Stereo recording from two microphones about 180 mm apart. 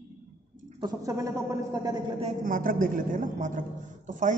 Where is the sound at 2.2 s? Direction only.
45° right (ahead or behind).